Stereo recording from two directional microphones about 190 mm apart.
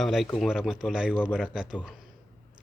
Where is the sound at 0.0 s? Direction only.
Centre (ahead or behind).